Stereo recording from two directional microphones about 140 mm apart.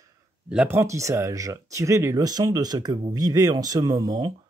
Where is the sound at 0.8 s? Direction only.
20° right (ahead or behind).